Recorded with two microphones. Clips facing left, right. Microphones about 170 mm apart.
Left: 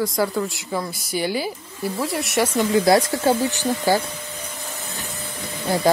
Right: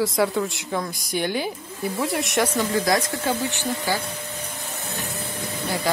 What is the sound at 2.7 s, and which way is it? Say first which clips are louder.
Speech: left 8 dB; 30° left (ahead or behind).